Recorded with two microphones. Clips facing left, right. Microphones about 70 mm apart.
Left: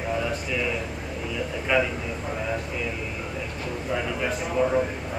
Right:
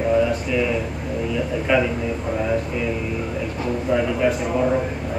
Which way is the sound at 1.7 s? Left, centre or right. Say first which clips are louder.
Right 4 dB; centre.